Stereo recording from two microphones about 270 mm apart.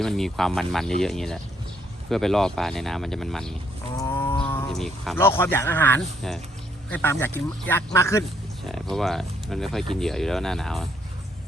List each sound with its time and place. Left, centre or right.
0.0 s speech: centre
3.9 s wild animals: centre
4.3 s a sound: centre
4.7 s speech: centre